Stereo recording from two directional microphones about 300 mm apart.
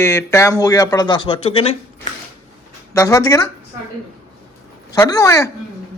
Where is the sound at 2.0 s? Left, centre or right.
Left.